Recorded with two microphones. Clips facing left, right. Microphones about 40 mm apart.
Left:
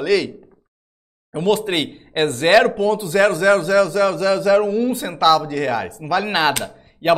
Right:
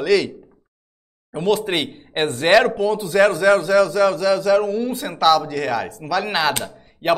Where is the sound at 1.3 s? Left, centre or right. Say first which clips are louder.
Left 1 dB; centre.